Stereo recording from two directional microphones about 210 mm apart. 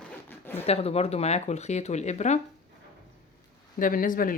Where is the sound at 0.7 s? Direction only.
30° left (ahead or behind).